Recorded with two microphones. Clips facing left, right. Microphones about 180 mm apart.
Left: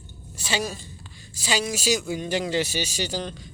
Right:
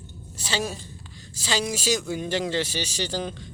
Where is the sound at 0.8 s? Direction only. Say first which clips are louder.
Right 1 dB; 10° left (ahead or behind).